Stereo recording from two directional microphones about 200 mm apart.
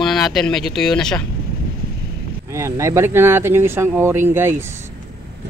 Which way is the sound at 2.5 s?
15° right (ahead or behind).